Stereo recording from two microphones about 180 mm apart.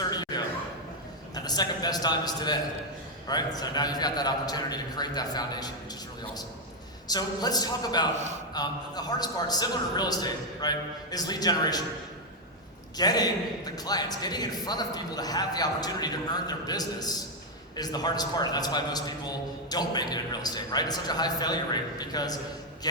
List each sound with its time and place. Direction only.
0.1 s a sound: 20° left (ahead or behind)
1.5 s a man's voice: 20° left (ahead or behind)
7.1 s a man's voice: 20° left (ahead or behind)
8.1 s a man's voice: 40° right (ahead or behind)
8.5 s a man's voice: 20° left (ahead or behind)
13.0 s a man's voice: 20° left (ahead or behind)